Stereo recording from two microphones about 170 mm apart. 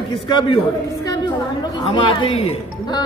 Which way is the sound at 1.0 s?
25° left (ahead or behind).